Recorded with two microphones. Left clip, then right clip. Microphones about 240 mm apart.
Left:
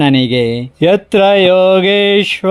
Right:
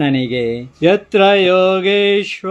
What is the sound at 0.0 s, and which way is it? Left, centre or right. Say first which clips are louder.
Speech: left 5 dB; left.